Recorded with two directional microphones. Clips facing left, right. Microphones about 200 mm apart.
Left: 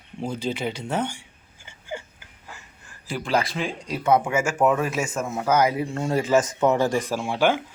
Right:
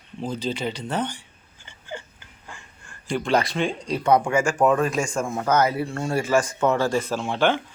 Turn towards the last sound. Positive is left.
turn(degrees=10)  # may be behind; listen again after turning